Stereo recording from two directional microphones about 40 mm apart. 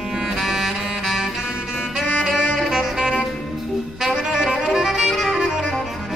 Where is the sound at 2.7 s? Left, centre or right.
Centre.